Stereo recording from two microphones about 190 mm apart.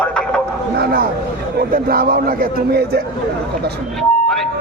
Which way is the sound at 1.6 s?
50° right (ahead or behind).